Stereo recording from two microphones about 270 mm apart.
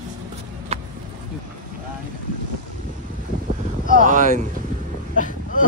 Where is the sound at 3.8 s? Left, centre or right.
Right.